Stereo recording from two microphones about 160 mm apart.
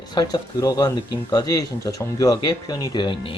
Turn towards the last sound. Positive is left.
turn(degrees=30)  # may be behind; listen again after turning